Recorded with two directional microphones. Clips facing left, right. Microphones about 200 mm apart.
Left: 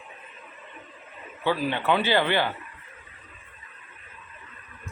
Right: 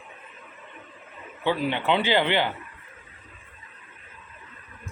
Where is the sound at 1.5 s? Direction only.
20° right (ahead or behind).